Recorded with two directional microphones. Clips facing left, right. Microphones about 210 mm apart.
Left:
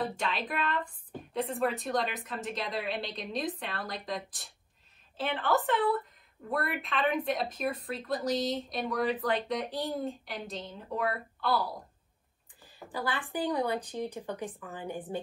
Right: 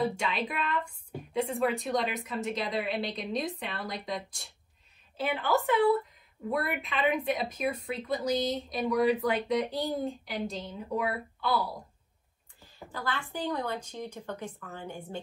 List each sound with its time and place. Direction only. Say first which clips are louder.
0.1 s speech: right 1 dB; centre (ahead or behind)
12.9 s speech: left 2 dB; 15° left (ahead or behind)